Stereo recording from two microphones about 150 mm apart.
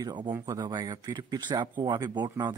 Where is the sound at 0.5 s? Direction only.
25° right (ahead or behind).